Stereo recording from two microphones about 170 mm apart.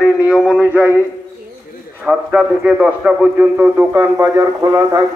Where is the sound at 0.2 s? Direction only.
5° right (ahead or behind).